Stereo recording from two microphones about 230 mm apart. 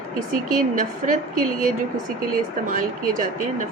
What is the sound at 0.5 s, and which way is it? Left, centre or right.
A woman's voice, right.